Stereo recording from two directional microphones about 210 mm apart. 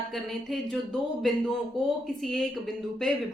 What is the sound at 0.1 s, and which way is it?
Speech, centre (ahead or behind).